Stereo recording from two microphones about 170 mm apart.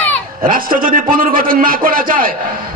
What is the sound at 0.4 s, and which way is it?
A man's voice, 55° right (ahead or behind).